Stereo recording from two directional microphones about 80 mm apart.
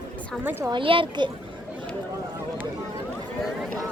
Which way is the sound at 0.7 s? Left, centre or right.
Right.